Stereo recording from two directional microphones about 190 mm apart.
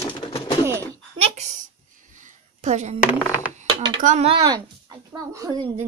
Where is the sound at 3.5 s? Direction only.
40° right (ahead or behind); by 5.7 s 20° right (ahead or behind).